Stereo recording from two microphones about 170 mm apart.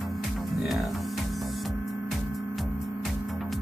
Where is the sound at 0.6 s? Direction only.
Centre (ahead or behind).